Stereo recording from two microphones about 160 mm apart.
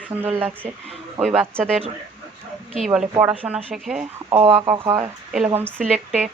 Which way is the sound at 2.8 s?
5° right (ahead or behind).